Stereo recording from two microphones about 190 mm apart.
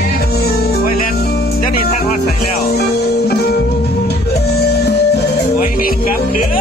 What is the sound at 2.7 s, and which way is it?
Music, 55° left (ahead or behind).